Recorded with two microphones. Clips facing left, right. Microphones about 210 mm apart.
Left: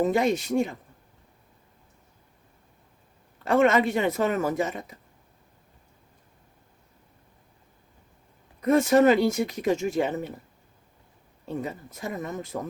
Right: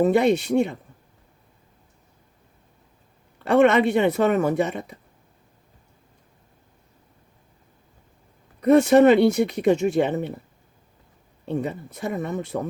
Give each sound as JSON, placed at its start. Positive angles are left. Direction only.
{"t": 0.0, "sound": "speech", "side_deg": -65}
{"t": 3.3, "sound": "speech", "side_deg": -70}
{"t": 8.6, "sound": "speech", "side_deg": -70}
{"t": 11.4, "sound": "speech", "side_deg": -70}